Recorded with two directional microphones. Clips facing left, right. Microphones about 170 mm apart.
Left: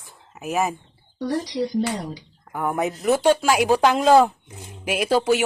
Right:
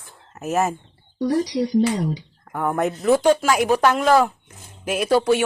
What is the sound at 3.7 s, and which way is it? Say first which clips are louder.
A woman's voice: left 3 dB; 15° left (ahead or behind).